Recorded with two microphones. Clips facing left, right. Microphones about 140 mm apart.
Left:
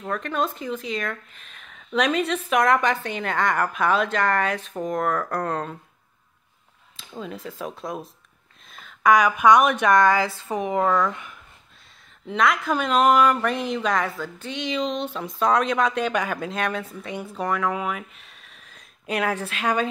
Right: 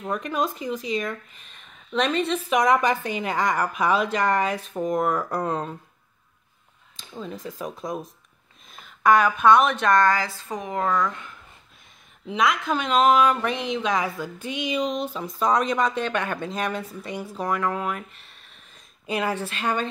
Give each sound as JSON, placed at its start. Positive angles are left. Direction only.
{"t": 0.0, "sound": "speech", "side_deg": -10}
{"t": 7.0, "sound": "speech", "side_deg": 0}
{"t": 8.7, "sound": "a sound", "side_deg": -5}
{"t": 9.1, "sound": "speech", "side_deg": 10}
{"t": 10.9, "sound": "speech", "side_deg": 5}
{"t": 12.3, "sound": "speech", "side_deg": 0}